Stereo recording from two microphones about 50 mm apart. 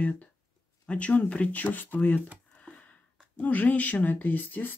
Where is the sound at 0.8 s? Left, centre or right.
Left.